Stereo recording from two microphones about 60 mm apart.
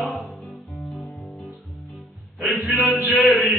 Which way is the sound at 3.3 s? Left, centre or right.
Centre.